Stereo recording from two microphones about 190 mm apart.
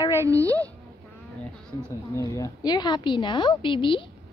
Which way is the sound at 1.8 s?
15° left (ahead or behind).